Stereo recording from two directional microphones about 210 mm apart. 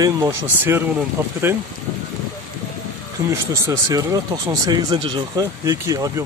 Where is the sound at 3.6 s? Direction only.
15° right (ahead or behind).